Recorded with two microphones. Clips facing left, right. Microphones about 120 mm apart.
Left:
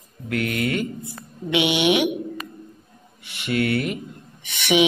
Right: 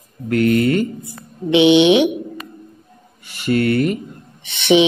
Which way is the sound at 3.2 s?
40° right (ahead or behind).